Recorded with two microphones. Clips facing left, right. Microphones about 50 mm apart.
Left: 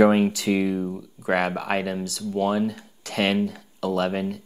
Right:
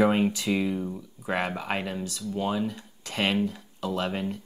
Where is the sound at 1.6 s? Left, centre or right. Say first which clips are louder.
Left 5 dB; left.